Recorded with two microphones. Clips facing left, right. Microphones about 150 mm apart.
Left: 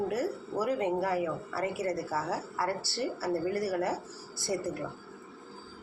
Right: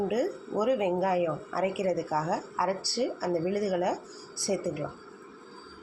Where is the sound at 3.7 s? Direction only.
15° right (ahead or behind).